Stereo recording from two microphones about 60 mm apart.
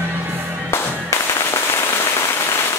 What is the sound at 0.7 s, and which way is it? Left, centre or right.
Firecracker, left.